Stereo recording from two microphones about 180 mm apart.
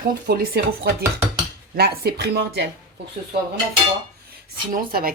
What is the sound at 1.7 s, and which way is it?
Speech, 60° right (ahead or behind).